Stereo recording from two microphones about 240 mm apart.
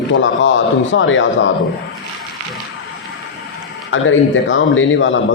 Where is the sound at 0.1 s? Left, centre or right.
Left.